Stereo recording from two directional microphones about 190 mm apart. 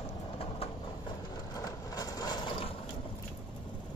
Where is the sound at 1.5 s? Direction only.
20° left (ahead or behind).